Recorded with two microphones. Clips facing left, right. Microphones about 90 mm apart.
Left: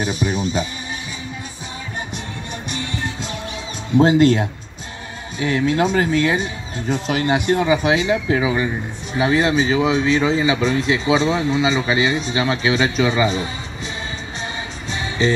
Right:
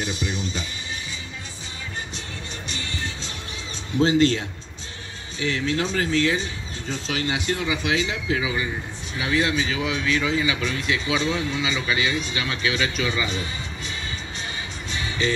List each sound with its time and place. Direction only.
0.0 s speech: 50° left (ahead or behind)
4.0 s speech: 45° left (ahead or behind)
14.9 s music: 30° left (ahead or behind)